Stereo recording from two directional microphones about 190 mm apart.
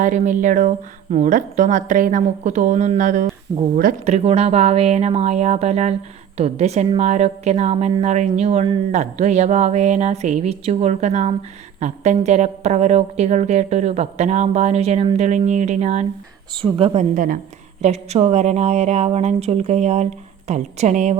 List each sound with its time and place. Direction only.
0.0 s a woman's voice: 40° right (ahead or behind)